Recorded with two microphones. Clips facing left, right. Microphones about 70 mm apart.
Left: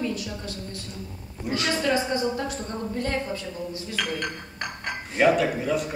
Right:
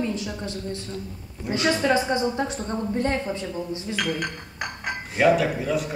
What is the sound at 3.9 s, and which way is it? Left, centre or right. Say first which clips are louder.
Speech: right 2 dB; centre.